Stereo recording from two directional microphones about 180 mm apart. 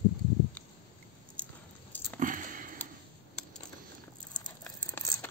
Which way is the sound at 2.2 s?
45° right (ahead or behind).